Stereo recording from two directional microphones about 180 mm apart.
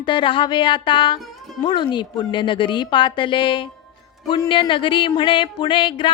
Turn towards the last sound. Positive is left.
turn(degrees=25)  # may be behind; listen again after turning